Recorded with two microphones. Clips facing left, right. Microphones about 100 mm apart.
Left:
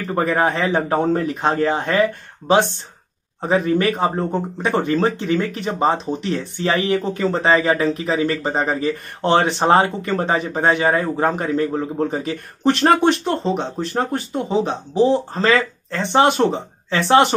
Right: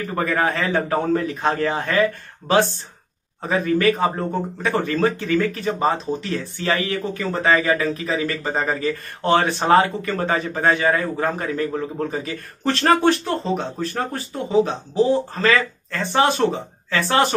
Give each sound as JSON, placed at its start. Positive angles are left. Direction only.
{"t": 0.1, "sound": "speech", "side_deg": 30}